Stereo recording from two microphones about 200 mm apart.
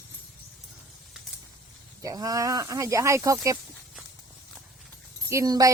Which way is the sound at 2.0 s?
20° right (ahead or behind).